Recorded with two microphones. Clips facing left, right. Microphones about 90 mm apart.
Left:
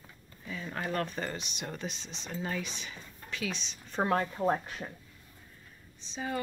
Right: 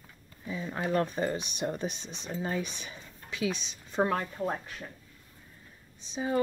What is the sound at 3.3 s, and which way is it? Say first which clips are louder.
Speech: right 5 dB; 15° right (ahead or behind).